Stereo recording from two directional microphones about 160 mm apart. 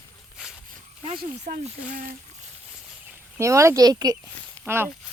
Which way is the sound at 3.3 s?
20° right (ahead or behind).